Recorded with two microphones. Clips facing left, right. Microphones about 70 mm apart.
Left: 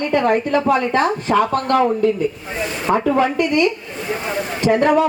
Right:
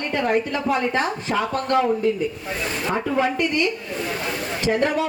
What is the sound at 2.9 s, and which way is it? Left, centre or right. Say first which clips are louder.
Speech: left 6 dB; left.